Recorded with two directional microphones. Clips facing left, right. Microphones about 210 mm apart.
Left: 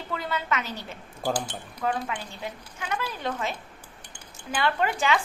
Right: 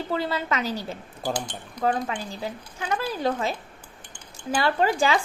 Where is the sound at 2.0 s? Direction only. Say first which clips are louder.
Right 3 dB; 35° right (ahead or behind).